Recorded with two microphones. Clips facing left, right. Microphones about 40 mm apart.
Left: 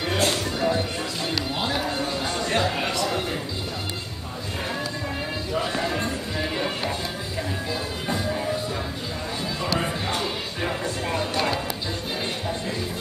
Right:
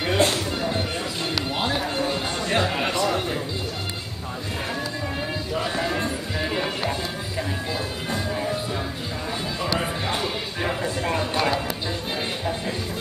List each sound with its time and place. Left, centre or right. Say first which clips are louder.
0.0 s music: right 2 dB; centre
2.9 s a sound: right 3 dB; right
5.5 s music: even; centre
8.1 s music: left 1 dB; centre
9.6 s music: even; centre